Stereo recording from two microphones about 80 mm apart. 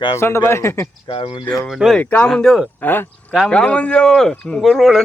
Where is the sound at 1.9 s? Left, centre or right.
Centre.